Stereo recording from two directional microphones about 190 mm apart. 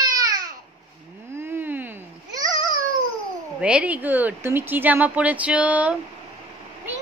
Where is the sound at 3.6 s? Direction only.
5° right (ahead or behind).